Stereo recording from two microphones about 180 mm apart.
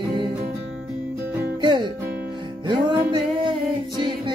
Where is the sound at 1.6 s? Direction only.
25° right (ahead or behind).